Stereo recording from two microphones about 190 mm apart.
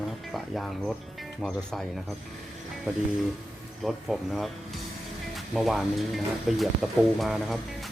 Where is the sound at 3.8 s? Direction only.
Centre (ahead or behind).